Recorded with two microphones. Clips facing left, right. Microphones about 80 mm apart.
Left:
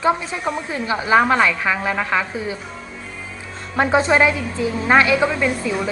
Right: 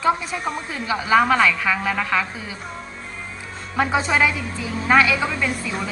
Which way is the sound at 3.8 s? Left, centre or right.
Left.